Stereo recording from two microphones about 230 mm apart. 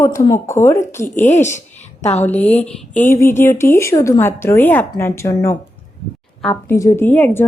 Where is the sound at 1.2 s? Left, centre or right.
Left.